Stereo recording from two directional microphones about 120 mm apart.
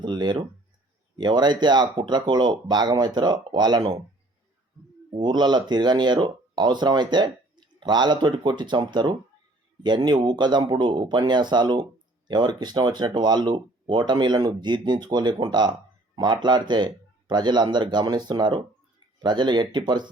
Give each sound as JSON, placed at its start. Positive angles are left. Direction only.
{"t": 0.0, "sound": "speech", "side_deg": -40}
{"t": 5.1, "sound": "speech", "side_deg": -40}